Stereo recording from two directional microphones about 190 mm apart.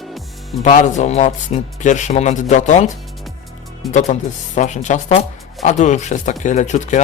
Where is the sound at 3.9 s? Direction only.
40° left (ahead or behind).